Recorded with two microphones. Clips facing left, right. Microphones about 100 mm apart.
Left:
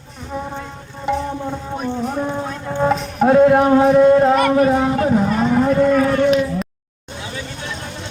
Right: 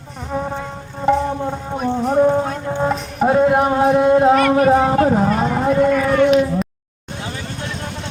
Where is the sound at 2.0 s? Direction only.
40° right (ahead or behind).